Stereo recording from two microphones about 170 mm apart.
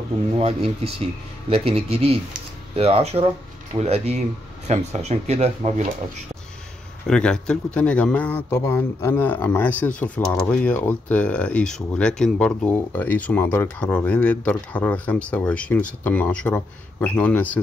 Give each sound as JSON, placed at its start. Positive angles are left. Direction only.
{"t": 0.4, "sound": "speech", "side_deg": -35}
{"t": 7.1, "sound": "speech", "side_deg": 5}